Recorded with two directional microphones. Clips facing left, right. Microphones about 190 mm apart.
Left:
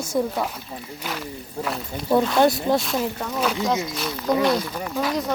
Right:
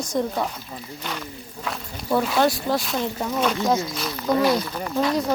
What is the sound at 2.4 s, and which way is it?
Speech, 20° left (ahead or behind).